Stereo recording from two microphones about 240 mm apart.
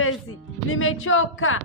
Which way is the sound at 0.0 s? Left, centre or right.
Left.